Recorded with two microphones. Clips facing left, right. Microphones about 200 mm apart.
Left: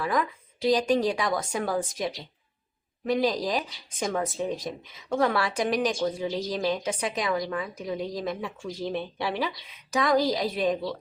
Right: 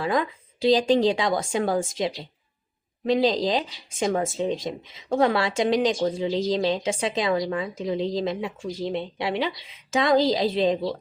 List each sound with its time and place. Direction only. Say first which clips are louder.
0.0 s speech: right 3 dB; 25° right (ahead or behind)
3.1 s speech: right 4 dB; 25° right (ahead or behind)